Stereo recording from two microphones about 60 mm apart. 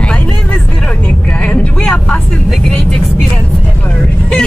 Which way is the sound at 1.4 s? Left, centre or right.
Centre.